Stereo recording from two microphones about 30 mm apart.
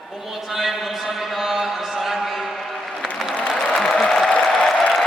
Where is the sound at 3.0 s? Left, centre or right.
Centre.